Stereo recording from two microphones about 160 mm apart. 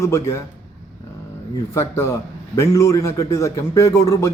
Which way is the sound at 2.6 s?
20° left (ahead or behind).